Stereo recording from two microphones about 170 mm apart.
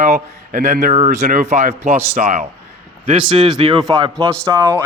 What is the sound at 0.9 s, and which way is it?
Speech, 45° right (ahead or behind).